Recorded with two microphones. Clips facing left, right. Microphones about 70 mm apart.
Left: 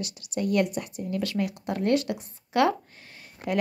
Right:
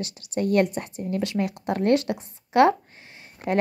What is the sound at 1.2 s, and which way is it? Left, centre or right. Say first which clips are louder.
Speech: right 2 dB; right.